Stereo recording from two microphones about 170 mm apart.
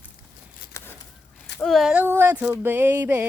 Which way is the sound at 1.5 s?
Centre (ahead or behind).